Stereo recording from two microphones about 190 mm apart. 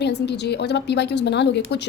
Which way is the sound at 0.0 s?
65° left (ahead or behind).